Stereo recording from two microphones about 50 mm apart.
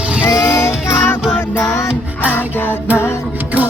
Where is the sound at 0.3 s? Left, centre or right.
Left.